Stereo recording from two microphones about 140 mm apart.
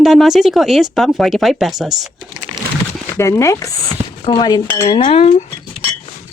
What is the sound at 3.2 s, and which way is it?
Speech, 20° left (ahead or behind).